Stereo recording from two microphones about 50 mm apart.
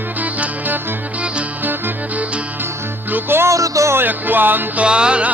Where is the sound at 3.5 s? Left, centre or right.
Right.